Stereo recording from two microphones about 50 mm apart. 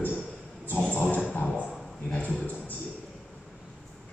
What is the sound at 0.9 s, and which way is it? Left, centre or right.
Dog, left.